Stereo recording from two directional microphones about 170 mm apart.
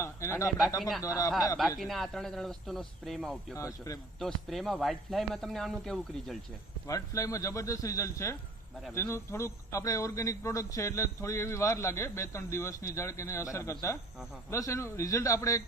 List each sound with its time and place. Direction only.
0.0 s speech: 15° left (ahead or behind)
0.8 s speech: centre (ahead or behind)
1.0 s a man's voice: 20° left (ahead or behind)
1.8 s speech: centre (ahead or behind)
3.5 s a man's voice: 20° left (ahead or behind)
4.2 s speech: centre (ahead or behind)
6.8 s speech: 20° left (ahead or behind)